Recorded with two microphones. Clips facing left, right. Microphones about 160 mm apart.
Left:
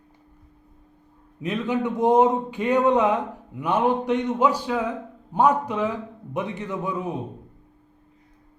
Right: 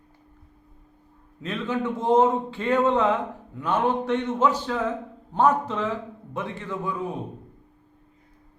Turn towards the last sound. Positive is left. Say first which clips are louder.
# left 2 dB
turn(degrees=20)  # may be behind; listen again after turning